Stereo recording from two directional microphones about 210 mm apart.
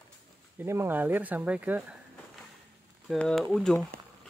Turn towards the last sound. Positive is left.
turn(degrees=0)  # may be behind; listen again after turning